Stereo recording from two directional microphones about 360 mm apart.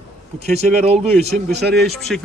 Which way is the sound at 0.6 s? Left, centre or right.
Centre.